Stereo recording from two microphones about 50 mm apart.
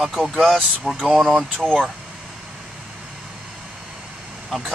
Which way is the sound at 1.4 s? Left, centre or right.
Centre.